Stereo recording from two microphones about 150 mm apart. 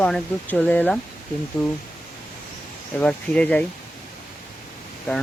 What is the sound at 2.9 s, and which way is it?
Speech, 10° left (ahead or behind).